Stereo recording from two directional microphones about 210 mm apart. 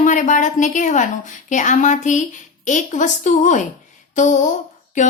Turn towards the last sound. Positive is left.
turn(degrees=35)  # may be behind; listen again after turning